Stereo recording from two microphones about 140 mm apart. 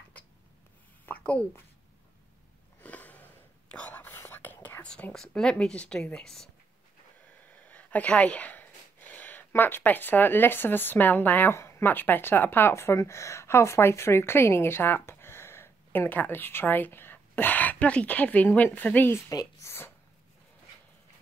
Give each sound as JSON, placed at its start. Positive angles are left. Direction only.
{"t": 1.0, "sound": "a sound", "side_deg": 10}
{"t": 2.8, "sound": "sniff", "side_deg": 10}
{"t": 3.7, "sound": "whispering", "side_deg": 15}
{"t": 7.4, "sound": "speech", "side_deg": 10}